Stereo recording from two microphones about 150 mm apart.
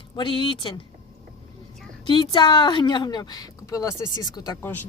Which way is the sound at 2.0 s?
30° left (ahead or behind).